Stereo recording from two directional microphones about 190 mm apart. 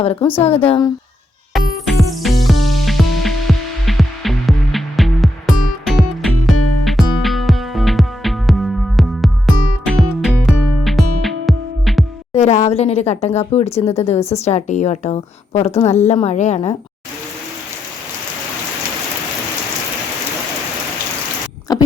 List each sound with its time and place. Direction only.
0.0 s a woman's voice: 30° left (ahead or behind)
1.5 s music: centre (ahead or behind)
12.3 s a woman's voice: 35° left (ahead or behind)
21.7 s a sound: 20° left (ahead or behind)